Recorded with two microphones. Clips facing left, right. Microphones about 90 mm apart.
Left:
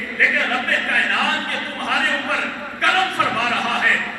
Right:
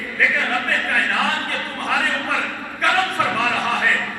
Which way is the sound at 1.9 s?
20° left (ahead or behind).